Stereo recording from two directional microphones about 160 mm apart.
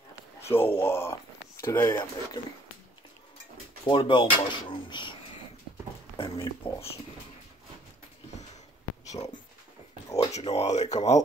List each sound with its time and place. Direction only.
0.5 s speech: 15° left (ahead or behind)
3.8 s speech: 30° left (ahead or behind)
6.1 s speech: 35° left (ahead or behind)
9.1 s speech: 45° left (ahead or behind)